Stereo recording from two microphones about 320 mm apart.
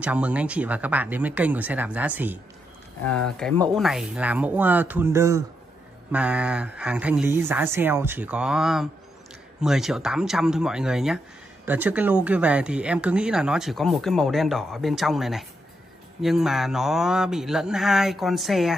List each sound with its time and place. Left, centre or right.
0.0 s speech: centre